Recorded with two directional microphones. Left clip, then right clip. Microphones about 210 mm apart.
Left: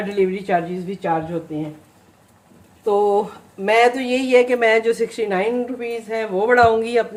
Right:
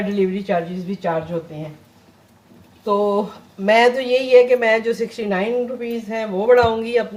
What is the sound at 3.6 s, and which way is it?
Speech, 40° left (ahead or behind).